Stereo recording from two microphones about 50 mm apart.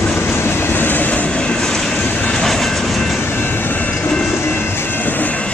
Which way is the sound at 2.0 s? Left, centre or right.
Left.